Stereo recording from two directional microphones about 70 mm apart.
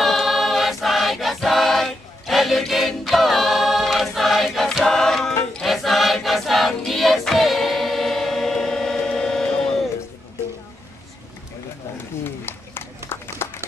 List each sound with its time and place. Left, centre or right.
0.0 s choir: centre
12.2 s run: left